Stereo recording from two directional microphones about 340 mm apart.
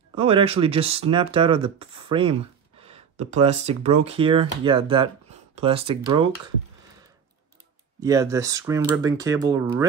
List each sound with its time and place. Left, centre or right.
0.1 s speech: centre
8.0 s speech: centre